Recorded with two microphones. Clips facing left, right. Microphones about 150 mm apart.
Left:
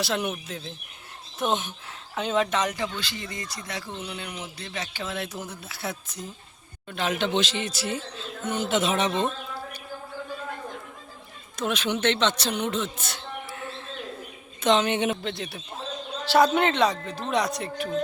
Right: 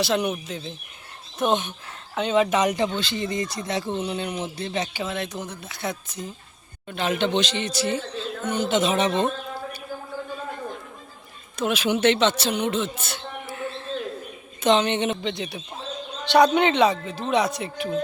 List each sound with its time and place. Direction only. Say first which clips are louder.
0.0 s speech: right 4 dB; centre (ahead or behind)
2.5 s speech: right 5 dB; 15° right (ahead or behind)
5.0 s speech: right 3 dB; 5° left (ahead or behind)
11.5 s speech: right 4 dB; 5° right (ahead or behind)